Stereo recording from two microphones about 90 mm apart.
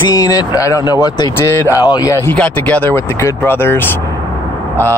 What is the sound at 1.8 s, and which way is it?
Speech, 45° left (ahead or behind).